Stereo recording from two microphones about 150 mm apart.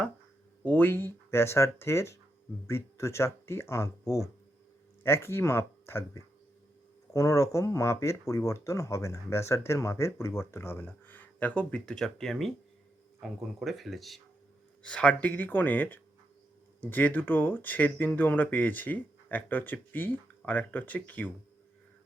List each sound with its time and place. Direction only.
0.6 s speech: 10° left (ahead or behind)
13.6 s speech: centre (ahead or behind)